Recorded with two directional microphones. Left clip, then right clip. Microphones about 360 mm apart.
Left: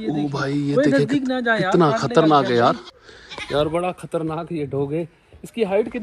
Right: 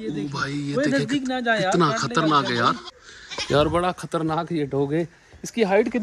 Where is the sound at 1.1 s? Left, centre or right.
Centre.